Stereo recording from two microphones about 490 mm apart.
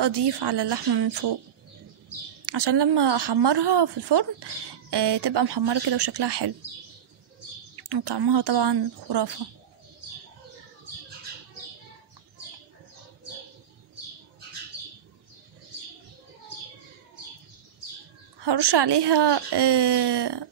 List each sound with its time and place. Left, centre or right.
0.0 s a woman's voice: right
2.4 s a woman's voice: right
7.7 s a woman's voice: right
18.4 s a woman's voice: right